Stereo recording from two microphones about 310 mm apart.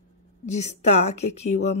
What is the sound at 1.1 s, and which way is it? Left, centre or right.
Speech, left.